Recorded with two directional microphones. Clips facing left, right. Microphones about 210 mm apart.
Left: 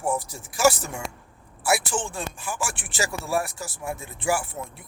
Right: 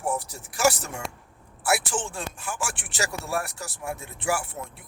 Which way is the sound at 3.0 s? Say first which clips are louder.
Left 3 dB; centre (ahead or behind).